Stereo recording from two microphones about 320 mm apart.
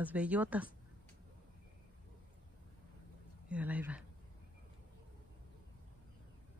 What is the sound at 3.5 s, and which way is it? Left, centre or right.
Speech, centre.